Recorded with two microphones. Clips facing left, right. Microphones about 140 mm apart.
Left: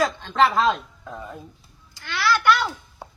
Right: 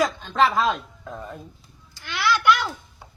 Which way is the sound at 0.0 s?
10° right (ahead or behind).